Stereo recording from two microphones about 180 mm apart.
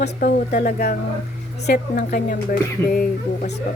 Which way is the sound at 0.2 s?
50° left (ahead or behind).